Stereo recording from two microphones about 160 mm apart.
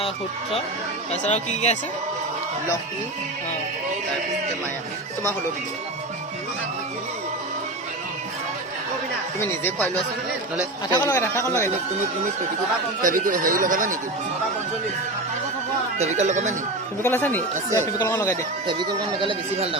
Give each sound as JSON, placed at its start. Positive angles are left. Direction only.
{"t": 1.3, "sound": "speech", "side_deg": 45}
{"t": 9.4, "sound": "speech", "side_deg": 10}
{"t": 13.0, "sound": "speech", "side_deg": -55}
{"t": 16.0, "sound": "speech", "side_deg": -45}
{"t": 17.0, "sound": "speech", "side_deg": 15}
{"t": 18.7, "sound": "speech", "side_deg": -30}